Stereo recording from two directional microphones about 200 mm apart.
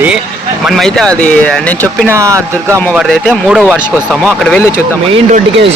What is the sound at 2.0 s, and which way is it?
Speech, 15° right (ahead or behind).